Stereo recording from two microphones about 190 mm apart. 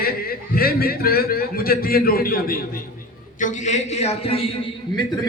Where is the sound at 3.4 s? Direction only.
40° left (ahead or behind).